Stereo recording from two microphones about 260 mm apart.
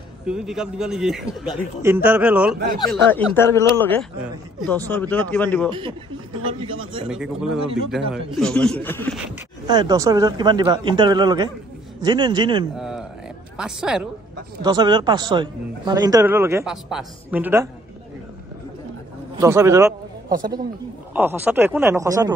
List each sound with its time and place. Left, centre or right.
0.3 s a man's voice: centre
5.7 s speech: centre
7.1 s a man's voice: centre
9.7 s a man's voice: centre
12.7 s a man's voice: centre
14.6 s a man's voice: centre
19.3 s a man's voice: centre